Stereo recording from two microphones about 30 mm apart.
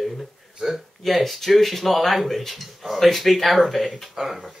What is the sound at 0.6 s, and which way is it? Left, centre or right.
Speech, right.